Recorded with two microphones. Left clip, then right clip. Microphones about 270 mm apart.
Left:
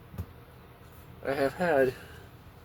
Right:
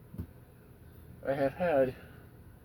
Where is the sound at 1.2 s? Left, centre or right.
Left.